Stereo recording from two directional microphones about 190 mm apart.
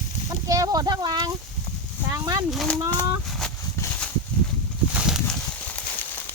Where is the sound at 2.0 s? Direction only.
20° right (ahead or behind).